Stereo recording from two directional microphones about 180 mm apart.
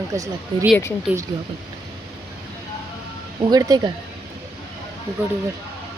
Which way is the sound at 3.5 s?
20° right (ahead or behind).